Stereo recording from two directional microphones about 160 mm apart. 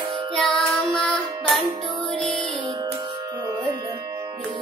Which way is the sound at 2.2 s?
5° left (ahead or behind).